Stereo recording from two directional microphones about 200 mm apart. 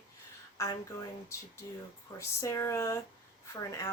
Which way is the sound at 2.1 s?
15° left (ahead or behind).